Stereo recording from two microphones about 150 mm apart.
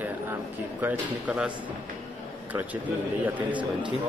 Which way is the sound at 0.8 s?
10° right (ahead or behind).